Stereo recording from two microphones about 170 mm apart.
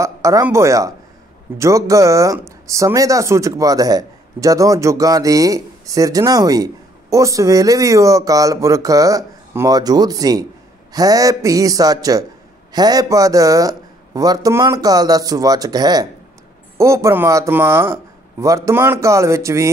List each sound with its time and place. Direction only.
0.0 s speech: 20° right (ahead or behind)